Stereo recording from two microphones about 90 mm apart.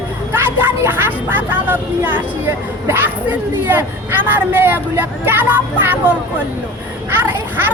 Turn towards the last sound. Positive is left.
turn(degrees=-25)  # may be behind; listen again after turning